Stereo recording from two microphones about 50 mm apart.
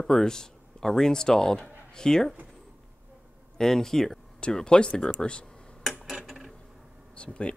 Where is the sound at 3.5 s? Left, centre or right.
Centre.